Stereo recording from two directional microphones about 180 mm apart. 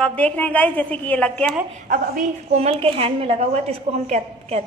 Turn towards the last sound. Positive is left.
turn(degrees=-40)  # may be behind; listen again after turning